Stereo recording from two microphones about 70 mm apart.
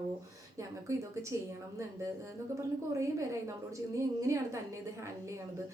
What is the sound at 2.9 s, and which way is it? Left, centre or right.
A woman's voice, right.